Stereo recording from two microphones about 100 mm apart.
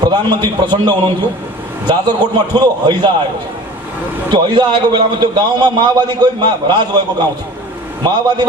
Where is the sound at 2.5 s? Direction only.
45° right (ahead or behind).